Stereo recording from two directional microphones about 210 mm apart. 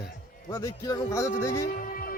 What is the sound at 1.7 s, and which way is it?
Music, 40° left (ahead or behind).